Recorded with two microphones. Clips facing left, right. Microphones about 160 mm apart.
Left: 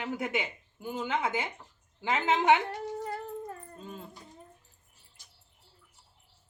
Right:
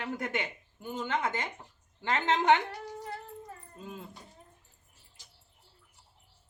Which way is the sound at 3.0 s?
50° left (ahead or behind).